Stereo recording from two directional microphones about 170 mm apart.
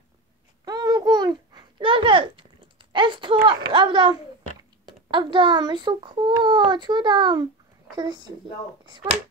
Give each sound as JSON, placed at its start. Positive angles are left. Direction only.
{"t": 0.7, "sound": "babbling", "side_deg": -20}
{"t": 3.4, "sound": "a child's voice", "side_deg": -30}